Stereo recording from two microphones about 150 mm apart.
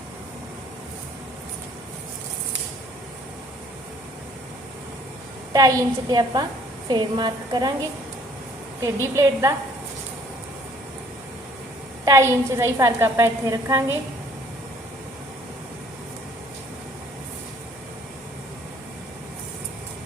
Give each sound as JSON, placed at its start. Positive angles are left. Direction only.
{"t": 5.5, "sound": "a woman's voice", "side_deg": -25}
{"t": 9.1, "sound": "a woman's voice", "side_deg": -20}
{"t": 12.0, "sound": "a woman's voice", "side_deg": -20}